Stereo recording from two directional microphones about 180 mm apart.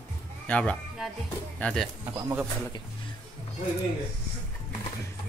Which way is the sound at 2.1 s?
10° right (ahead or behind).